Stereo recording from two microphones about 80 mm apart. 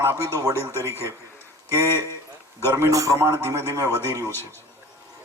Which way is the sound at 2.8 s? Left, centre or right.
Right.